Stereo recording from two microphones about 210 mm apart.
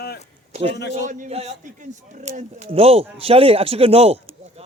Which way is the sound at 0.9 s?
35° right (ahead or behind).